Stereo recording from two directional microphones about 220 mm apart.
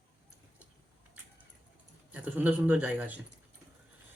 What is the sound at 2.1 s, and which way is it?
Speech, 5° right (ahead or behind).